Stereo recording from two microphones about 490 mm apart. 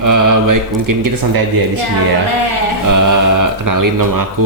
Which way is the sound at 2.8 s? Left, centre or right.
Right.